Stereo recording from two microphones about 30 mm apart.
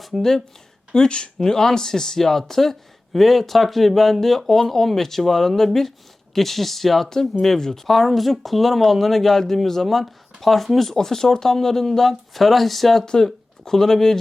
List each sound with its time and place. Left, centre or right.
0.2 s speech: centre
0.9 s speech: left; by 10.7 s centre
10.9 s speech: centre